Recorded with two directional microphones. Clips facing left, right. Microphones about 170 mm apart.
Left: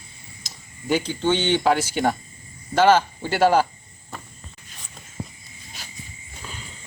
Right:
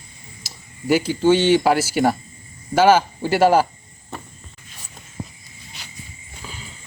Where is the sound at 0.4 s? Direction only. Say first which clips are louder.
Right 5 dB; 5° right (ahead or behind).